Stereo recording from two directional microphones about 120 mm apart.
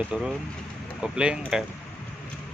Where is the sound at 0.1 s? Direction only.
10° right (ahead or behind).